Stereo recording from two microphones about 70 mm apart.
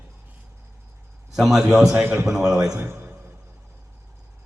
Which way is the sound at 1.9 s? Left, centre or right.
Centre.